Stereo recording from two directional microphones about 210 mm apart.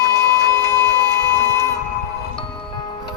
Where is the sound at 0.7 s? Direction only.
15° left (ahead or behind).